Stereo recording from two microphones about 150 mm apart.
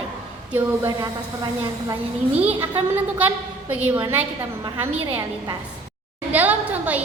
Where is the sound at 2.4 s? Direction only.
10° right (ahead or behind).